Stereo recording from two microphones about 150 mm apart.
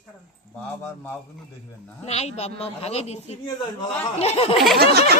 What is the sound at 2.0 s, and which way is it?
Speech, 45° left (ahead or behind).